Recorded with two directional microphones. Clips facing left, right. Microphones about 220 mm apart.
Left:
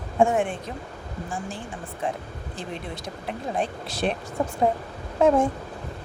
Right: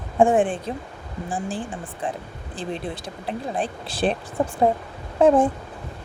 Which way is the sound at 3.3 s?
30° right (ahead or behind).